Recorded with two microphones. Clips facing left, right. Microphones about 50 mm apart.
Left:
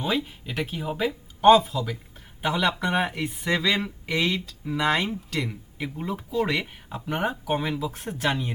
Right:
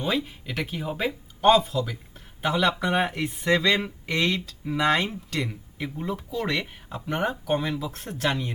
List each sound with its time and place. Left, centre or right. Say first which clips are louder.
0.0 s speech: even; centre
6.1 s speech: left 4 dB; centre